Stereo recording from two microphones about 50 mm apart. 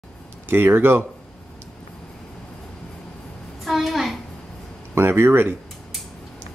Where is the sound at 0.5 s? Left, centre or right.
Right.